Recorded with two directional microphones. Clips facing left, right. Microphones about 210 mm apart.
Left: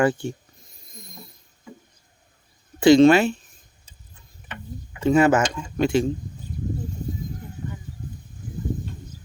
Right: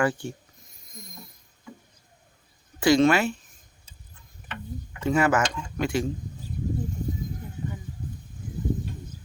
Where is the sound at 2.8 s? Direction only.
25° left (ahead or behind).